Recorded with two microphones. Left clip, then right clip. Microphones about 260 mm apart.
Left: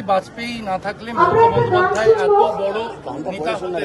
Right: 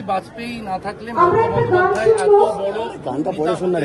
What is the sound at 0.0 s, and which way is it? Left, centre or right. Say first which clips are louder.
Speech: left 3 dB; left.